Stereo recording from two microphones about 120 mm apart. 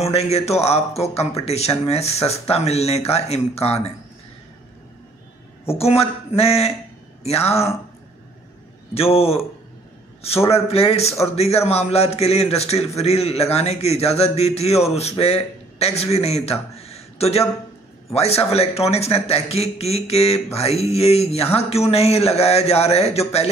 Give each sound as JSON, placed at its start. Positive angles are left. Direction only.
{"t": 0.0, "sound": "a man's voice", "side_deg": 60}
{"t": 5.8, "sound": "a man's voice", "side_deg": 55}
{"t": 8.9, "sound": "a man's voice", "side_deg": 55}
{"t": 10.5, "sound": "a man's voice", "side_deg": 55}
{"t": 16.7, "sound": "a sound", "side_deg": 60}
{"t": 18.1, "sound": "a man's voice", "side_deg": 60}